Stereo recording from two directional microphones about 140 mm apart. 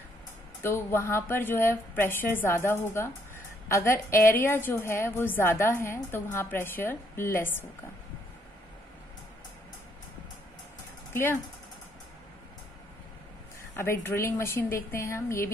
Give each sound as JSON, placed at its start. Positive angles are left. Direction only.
{"t": 0.6, "sound": "a woman's voice", "side_deg": 15}
{"t": 13.7, "sound": "speech", "side_deg": 15}